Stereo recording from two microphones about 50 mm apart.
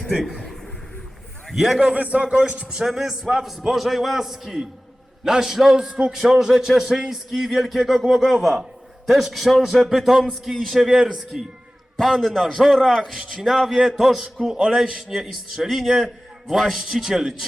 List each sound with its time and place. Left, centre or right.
0.1 s a man's voice: centre
1.5 s a man's voice: centre
1.9 s a man's voice: right; by 12.5 s centre
13.1 s a man's voice: centre